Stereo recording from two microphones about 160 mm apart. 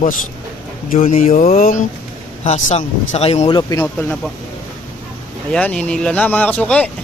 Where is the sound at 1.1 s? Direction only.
50° left (ahead or behind).